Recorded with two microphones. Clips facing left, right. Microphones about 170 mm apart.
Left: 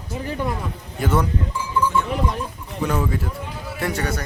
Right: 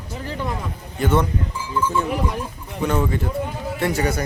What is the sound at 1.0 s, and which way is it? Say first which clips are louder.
Speech: right 2 dB; 5° left (ahead or behind).